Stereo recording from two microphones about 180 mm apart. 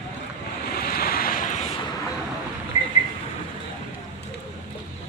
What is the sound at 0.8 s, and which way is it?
Waves, 55° left (ahead or behind).